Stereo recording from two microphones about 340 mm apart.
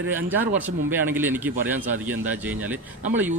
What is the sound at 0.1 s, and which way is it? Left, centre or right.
Speech, centre.